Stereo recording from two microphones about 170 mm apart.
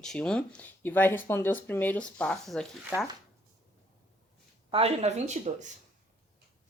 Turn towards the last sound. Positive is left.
turn(degrees=-45)  # may be behind; listen again after turning